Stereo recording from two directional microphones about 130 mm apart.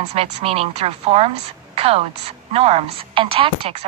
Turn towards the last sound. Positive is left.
turn(degrees=-45)  # may be behind; listen again after turning